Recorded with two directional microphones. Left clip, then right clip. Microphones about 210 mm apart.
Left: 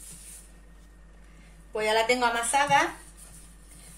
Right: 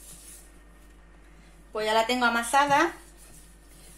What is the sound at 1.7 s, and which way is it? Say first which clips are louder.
Speech: even; 25° right (ahead or behind).